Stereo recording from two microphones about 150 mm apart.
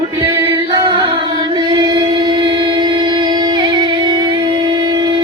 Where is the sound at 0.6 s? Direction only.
35° right (ahead or behind).